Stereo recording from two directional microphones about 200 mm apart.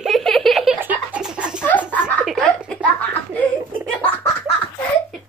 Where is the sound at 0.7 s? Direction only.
5° right (ahead or behind); by 4.3 s 10° left (ahead or behind).